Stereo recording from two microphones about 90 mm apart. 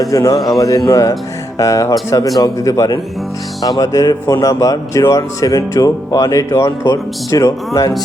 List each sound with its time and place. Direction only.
0.0 s speech: 40° left (ahead or behind)
0.3 s a man's voice: centre (ahead or behind)
0.9 s speech: 35° left (ahead or behind)